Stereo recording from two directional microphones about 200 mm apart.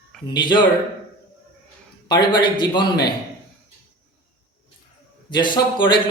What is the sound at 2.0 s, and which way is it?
A man's voice, 25° left (ahead or behind).